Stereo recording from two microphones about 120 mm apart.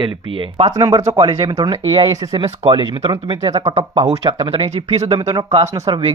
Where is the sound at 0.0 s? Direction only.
45° right (ahead or behind).